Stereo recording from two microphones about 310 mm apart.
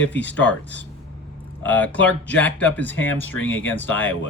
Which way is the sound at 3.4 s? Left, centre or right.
Left.